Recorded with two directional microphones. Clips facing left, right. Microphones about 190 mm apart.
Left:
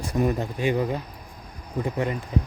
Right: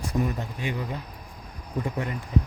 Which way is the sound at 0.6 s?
35° left (ahead or behind).